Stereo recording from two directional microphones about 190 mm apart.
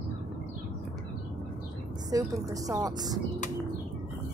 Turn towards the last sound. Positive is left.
turn(degrees=-20)  # may be behind; listen again after turning